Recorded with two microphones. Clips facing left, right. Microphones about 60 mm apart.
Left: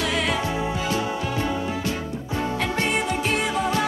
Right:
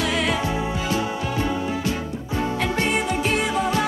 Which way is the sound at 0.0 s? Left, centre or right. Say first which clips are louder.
Right 1 dB; right.